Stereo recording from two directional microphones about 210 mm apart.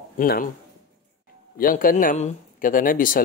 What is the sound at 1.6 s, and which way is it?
Speech, 40° left (ahead or behind).